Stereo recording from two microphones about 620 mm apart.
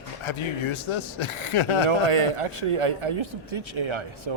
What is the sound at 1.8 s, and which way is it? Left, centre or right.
A man's voice, right.